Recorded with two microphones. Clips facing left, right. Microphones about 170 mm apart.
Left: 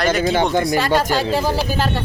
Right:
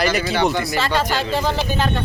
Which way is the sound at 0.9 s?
45° left (ahead or behind).